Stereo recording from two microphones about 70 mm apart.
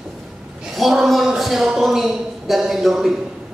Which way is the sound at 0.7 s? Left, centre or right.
Centre.